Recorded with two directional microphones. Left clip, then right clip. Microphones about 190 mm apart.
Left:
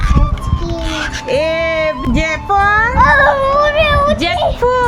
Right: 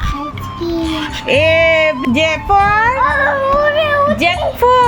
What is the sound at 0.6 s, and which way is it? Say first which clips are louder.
Speech: right 4 dB; 15° left (ahead or behind).